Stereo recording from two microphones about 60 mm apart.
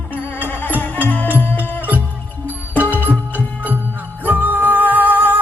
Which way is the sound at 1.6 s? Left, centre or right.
Right.